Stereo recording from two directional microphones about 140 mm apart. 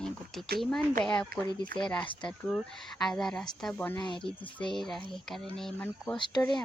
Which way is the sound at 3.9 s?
35° left (ahead or behind).